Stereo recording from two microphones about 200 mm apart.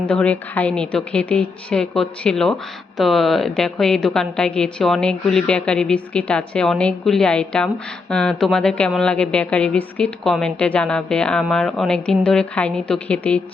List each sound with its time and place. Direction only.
0.0 s a woman's voice: 5° left (ahead or behind)